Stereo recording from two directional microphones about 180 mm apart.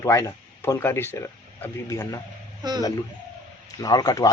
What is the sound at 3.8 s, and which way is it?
Speech, 20° left (ahead or behind).